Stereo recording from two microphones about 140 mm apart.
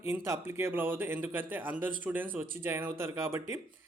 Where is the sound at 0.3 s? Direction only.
20° right (ahead or behind).